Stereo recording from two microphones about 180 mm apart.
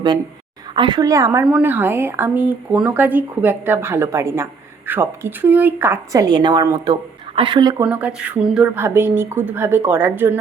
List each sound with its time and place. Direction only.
0.8 s a woman's voice: 25° right (ahead or behind)
7.9 s speech: 5° right (ahead or behind)